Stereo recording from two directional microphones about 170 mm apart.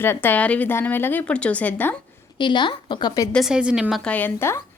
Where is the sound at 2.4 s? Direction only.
25° left (ahead or behind).